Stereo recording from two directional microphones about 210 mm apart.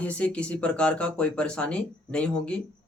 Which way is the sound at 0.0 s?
5° left (ahead or behind).